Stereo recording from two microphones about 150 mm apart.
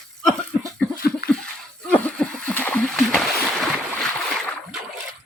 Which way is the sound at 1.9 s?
5° left (ahead or behind).